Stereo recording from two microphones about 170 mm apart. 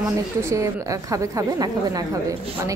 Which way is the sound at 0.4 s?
15° right (ahead or behind).